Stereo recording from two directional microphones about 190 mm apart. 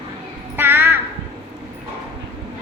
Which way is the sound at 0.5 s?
10° right (ahead or behind).